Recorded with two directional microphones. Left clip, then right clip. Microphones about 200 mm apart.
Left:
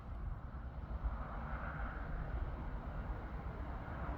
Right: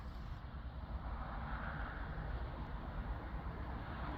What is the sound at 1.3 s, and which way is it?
Vehicle, 40° left (ahead or behind).